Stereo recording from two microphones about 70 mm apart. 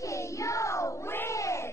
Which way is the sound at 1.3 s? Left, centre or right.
Left.